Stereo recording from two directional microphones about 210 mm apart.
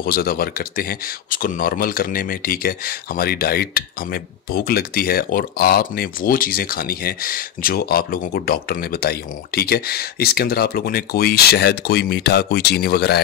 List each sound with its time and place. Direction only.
0.0 s speech: 45° left (ahead or behind)